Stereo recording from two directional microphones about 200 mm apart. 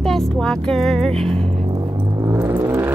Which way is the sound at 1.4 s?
30° right (ahead or behind).